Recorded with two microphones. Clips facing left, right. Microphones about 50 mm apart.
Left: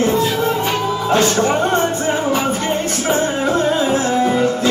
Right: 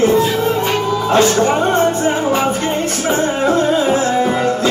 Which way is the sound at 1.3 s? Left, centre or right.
Centre.